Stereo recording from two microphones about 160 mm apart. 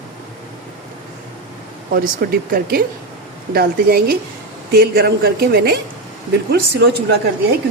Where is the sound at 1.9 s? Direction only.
65° right (ahead or behind).